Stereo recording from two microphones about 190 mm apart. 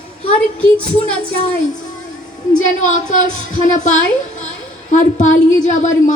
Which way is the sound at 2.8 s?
40° left (ahead or behind).